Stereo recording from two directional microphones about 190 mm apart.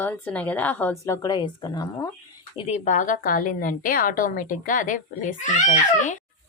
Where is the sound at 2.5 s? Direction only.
35° left (ahead or behind).